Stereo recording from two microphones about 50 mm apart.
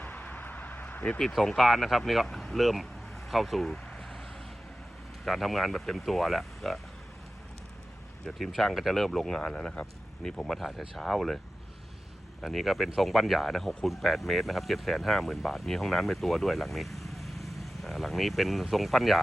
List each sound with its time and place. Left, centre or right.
0.0 s vehicle: left
1.2 s speech: centre
3.2 s a sound: centre
5.2 s speech: centre
8.3 s speech: centre
12.4 s speech: centre